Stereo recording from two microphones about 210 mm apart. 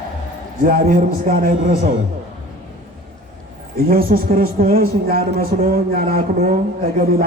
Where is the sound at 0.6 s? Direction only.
40° right (ahead or behind).